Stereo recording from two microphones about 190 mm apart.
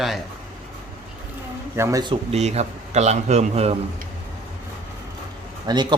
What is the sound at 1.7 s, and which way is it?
Speech, 15° right (ahead or behind).